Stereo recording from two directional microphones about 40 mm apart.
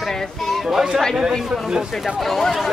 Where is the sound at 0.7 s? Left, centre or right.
Centre.